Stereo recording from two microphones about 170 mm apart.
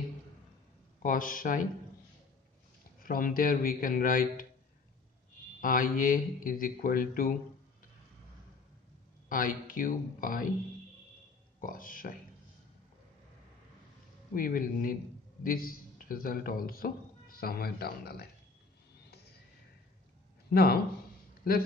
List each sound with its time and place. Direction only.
1.0 s a man's voice: 55° left (ahead or behind)
3.0 s a man's voice: 55° left (ahead or behind)
5.6 s a man's voice: 55° left (ahead or behind)
9.3 s a man's voice: 55° left (ahead or behind)
11.6 s a man's voice: 55° left (ahead or behind)
14.3 s a man's voice: 55° left (ahead or behind)
20.4 s speech: 65° left (ahead or behind)